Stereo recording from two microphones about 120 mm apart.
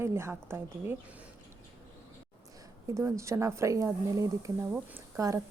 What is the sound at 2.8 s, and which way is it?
A woman's voice, 25° right (ahead or behind).